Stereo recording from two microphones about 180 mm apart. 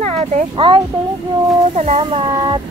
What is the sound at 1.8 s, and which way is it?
Speech, 35° right (ahead or behind).